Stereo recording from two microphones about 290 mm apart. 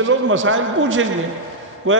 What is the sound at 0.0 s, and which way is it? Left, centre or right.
A man's voice, right.